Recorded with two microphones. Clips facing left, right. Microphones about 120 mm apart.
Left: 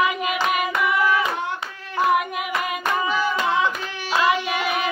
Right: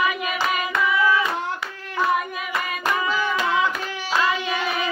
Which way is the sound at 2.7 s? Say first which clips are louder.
Right 1 dB; 20° left (ahead or behind).